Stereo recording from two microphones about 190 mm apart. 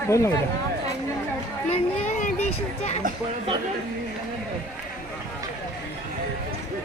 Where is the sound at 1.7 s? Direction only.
40° left (ahead or behind).